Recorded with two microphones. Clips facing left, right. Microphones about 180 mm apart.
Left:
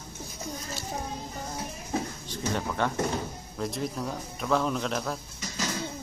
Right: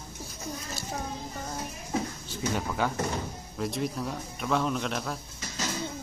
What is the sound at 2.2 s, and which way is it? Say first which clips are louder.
A man's voice: even; 5° right (ahead or behind).